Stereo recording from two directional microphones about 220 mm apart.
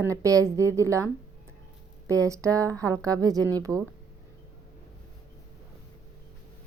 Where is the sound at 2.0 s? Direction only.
15° right (ahead or behind).